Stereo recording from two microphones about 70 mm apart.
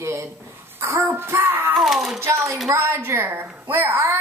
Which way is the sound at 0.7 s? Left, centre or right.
Right.